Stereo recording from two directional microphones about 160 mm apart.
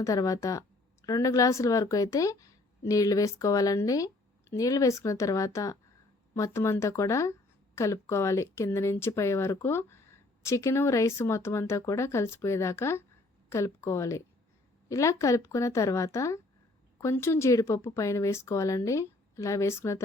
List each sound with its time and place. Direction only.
0.0 s a woman's voice: 20° left (ahead or behind)